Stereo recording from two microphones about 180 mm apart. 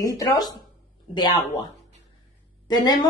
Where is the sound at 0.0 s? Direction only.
20° left (ahead or behind).